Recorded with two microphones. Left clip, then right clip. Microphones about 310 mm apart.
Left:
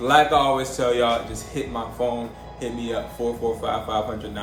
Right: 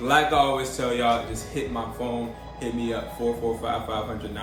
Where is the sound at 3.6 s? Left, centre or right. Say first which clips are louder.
Left 2 dB; centre.